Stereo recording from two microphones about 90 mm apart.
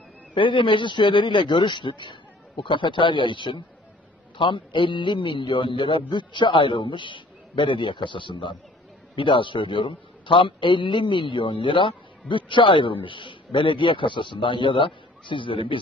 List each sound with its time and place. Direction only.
0.3 s a man's voice: 70° left (ahead or behind)